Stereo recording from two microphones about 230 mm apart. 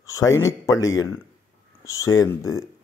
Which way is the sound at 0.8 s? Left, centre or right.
Left.